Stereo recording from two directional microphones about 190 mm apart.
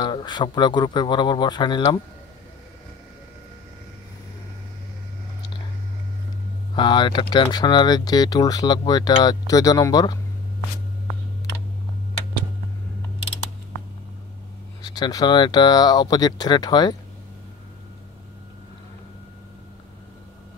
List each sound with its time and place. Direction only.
0.0 s speech: 25° left (ahead or behind)
6.7 s speech: 25° left (ahead or behind)
14.8 s speech: 20° left (ahead or behind)